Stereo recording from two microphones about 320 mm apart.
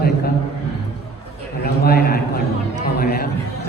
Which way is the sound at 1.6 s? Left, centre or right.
Left.